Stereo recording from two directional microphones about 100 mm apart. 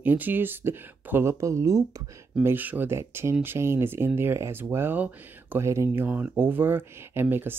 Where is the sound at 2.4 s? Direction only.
20° right (ahead or behind).